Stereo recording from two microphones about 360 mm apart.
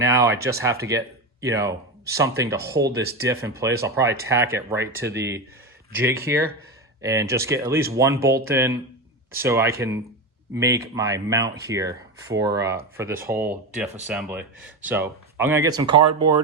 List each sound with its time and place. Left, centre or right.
0.0 s speech: centre
16.0 s speech: right